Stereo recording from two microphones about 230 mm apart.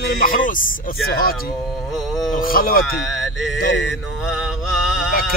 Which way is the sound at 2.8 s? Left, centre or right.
Centre.